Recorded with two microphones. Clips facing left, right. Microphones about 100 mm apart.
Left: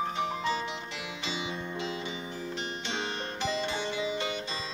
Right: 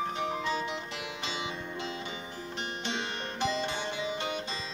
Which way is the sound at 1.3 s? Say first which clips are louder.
Left 3 dB; 55° right (ahead or behind).